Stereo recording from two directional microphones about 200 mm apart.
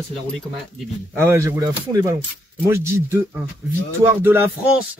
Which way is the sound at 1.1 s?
15° right (ahead or behind).